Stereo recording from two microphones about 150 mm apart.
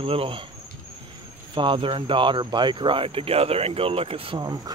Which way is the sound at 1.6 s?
35° right (ahead or behind).